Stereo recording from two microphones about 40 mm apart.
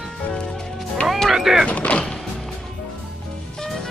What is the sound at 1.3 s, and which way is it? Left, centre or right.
Speech, centre.